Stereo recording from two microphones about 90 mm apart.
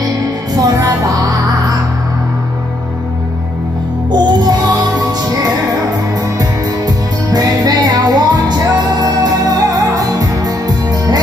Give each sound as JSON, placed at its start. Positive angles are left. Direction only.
{"t": 0.6, "sound": "music", "side_deg": -45}
{"t": 4.1, "sound": "music", "side_deg": -50}
{"t": 6.9, "sound": "music", "side_deg": -45}